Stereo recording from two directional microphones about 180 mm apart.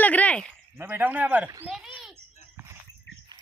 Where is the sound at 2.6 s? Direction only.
15° right (ahead or behind).